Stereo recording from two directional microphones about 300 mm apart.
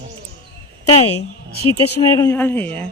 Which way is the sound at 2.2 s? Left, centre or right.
Centre.